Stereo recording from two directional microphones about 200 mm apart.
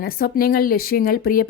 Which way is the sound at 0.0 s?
50° left (ahead or behind).